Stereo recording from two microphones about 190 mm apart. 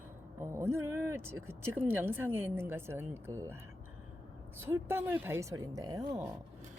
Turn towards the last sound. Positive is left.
turn(degrees=-20)  # may be behind; listen again after turning